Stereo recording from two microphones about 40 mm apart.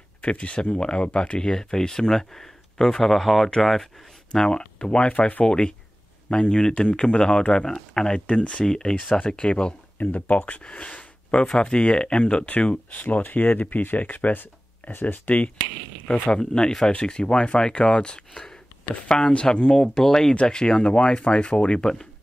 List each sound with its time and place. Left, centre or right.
0.2 s speech: left; by 3.9 s centre
4.3 s speech: left
8.3 s speech: left
8.6 s speech: centre
9.9 s speech: left
11.4 s speech: left
13.0 s speech: left
15.3 s speech: left
16.3 s speech: left